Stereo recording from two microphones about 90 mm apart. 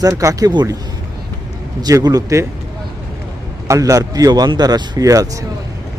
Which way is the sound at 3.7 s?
35° right (ahead or behind).